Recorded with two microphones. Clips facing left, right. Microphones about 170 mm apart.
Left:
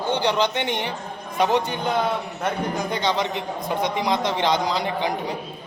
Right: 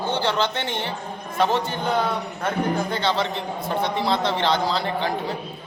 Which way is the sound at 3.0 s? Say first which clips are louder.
Even; 15° left (ahead or behind).